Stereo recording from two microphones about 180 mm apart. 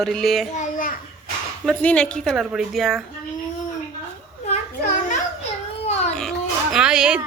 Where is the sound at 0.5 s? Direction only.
45° left (ahead or behind).